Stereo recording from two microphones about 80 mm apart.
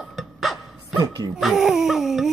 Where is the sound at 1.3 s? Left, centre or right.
Centre.